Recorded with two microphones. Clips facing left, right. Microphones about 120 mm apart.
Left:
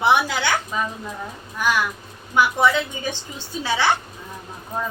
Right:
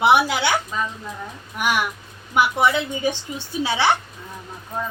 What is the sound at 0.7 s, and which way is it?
Speech, 10° left (ahead or behind).